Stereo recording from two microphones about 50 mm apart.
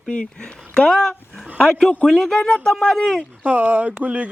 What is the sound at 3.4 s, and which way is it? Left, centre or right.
Speech, right.